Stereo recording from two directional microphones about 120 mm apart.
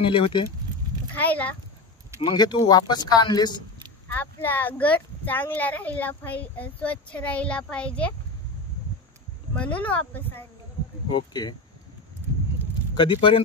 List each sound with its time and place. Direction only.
0.0 s speech: 45° left (ahead or behind)
1.1 s speech: 15° left (ahead or behind)
2.2 s a woman's voice: 35° left (ahead or behind)
4.1 s speech: 15° left (ahead or behind)
9.6 s speech: 10° left (ahead or behind)
11.1 s a woman's voice: 40° left (ahead or behind)
12.9 s speech: 45° left (ahead or behind)